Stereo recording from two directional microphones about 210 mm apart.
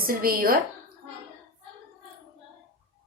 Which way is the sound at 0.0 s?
45° right (ahead or behind).